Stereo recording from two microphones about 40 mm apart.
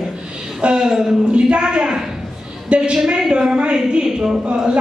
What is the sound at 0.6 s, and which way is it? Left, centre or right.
A woman's voice, right.